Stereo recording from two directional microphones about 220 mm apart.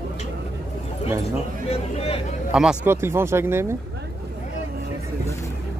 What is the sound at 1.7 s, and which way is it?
Speech, 25° left (ahead or behind).